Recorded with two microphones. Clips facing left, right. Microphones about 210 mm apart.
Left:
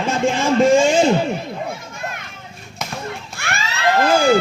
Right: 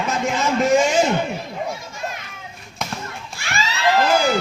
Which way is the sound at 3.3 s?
60° left (ahead or behind).